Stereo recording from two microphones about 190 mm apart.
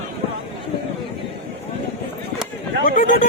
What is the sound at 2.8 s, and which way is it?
Speech, 50° left (ahead or behind).